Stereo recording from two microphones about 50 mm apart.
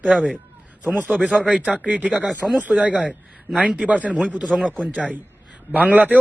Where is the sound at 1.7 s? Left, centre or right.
Right.